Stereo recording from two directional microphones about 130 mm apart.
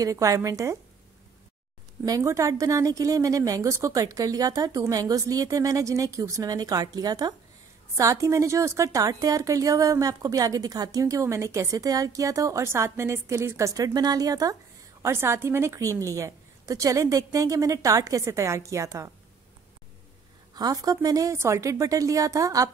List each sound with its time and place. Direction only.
0.0 s a woman's voice: 25° right (ahead or behind)
2.0 s a woman's voice: 25° right (ahead or behind)
20.5 s a woman's voice: 30° right (ahead or behind)